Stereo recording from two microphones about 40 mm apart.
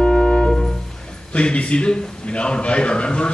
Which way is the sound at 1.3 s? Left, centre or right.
Left.